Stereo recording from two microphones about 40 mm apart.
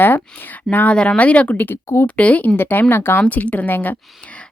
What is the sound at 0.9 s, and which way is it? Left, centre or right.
Speech, left.